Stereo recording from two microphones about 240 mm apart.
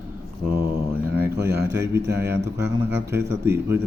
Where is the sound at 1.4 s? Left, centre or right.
Right.